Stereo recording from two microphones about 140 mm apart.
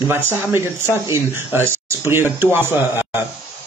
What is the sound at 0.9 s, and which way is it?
Speech, 20° right (ahead or behind).